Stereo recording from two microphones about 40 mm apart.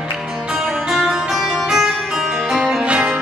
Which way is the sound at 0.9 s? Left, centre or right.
Centre.